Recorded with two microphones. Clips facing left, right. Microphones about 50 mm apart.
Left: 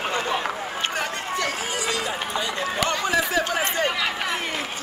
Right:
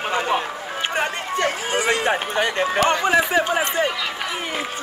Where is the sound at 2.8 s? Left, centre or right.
Right.